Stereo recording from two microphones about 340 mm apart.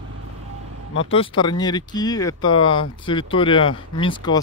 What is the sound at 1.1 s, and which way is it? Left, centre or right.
Speech, centre.